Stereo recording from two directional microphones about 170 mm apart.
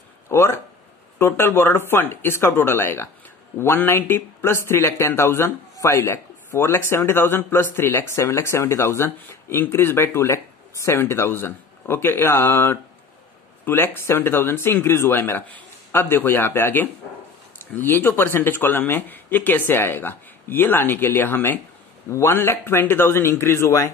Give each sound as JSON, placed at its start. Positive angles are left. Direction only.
{"t": 0.3, "sound": "speech", "side_deg": 15}